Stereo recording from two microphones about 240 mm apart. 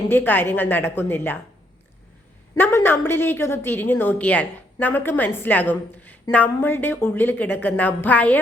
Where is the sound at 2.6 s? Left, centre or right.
Centre.